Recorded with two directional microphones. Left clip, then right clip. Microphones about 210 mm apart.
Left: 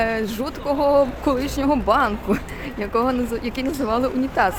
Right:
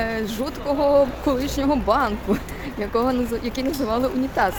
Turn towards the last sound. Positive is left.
turn(degrees=5)  # may be behind; listen again after turning